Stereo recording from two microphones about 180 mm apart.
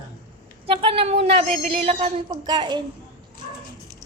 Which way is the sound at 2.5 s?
25° right (ahead or behind).